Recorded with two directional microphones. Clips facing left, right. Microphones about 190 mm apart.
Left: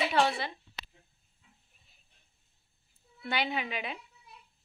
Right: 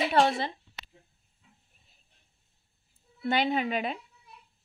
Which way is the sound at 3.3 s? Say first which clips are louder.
Right 6 dB; 45° right (ahead or behind).